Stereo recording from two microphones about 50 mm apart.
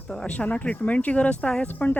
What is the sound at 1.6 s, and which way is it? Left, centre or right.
Speech, left.